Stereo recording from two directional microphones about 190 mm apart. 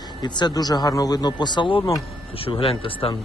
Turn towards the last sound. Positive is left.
turn(degrees=30)  # may be behind; listen again after turning